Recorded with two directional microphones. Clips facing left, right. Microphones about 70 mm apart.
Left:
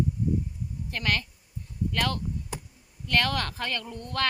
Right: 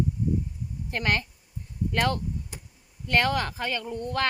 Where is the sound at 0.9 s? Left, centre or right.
Right.